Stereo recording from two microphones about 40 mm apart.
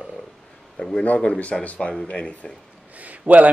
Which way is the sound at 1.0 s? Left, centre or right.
Left.